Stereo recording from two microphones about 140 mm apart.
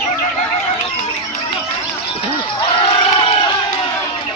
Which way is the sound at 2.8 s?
40° left (ahead or behind).